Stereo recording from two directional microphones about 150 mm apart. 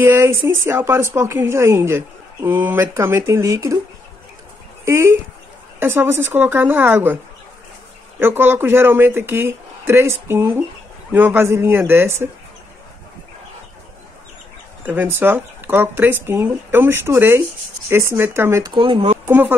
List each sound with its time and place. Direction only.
0.0 s speech: 15° right (ahead or behind)
4.8 s speech: 20° right (ahead or behind)
8.2 s speech: 15° right (ahead or behind)
14.9 s speech: 15° right (ahead or behind)
18.8 s speech: 40° right (ahead or behind)
19.2 s speech: 10° right (ahead or behind)